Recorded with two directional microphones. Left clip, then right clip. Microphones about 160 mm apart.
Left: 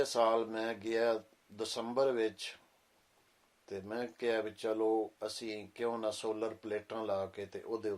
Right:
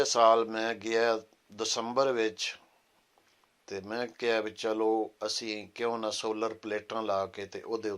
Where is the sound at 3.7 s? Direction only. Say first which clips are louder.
Right 5 dB; 20° right (ahead or behind).